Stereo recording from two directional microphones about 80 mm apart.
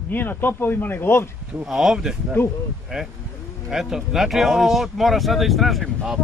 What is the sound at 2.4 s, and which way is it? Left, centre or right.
Speech, left.